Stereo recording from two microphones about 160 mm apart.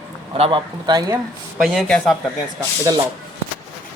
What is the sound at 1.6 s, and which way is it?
Speech, centre (ahead or behind).